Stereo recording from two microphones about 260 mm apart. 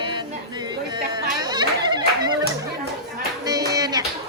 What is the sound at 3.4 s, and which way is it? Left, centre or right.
Clapping, centre.